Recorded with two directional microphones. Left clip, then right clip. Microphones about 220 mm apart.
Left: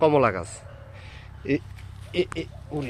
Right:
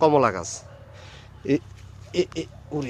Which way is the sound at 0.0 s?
5° right (ahead or behind).